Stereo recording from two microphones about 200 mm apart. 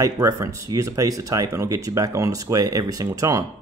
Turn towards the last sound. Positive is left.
turn(degrees=-15)  # may be behind; listen again after turning